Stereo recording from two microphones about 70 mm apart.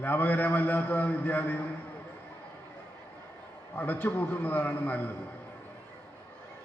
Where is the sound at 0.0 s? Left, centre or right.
Left.